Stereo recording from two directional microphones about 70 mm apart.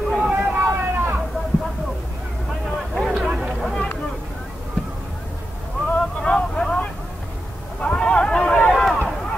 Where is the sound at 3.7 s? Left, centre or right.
Centre.